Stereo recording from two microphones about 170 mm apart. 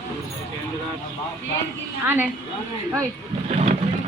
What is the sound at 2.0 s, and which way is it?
Speech, 10° right (ahead or behind).